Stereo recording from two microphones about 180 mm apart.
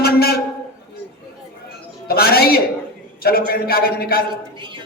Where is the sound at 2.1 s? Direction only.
60° left (ahead or behind).